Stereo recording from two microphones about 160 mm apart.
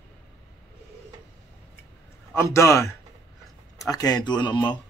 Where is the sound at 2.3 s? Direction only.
15° left (ahead or behind).